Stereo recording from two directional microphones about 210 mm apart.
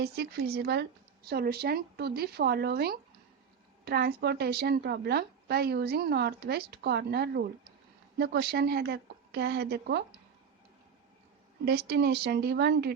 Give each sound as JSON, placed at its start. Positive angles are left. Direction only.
{"t": 0.0, "sound": "a woman's voice", "side_deg": -50}
{"t": 11.6, "sound": "a woman's voice", "side_deg": -50}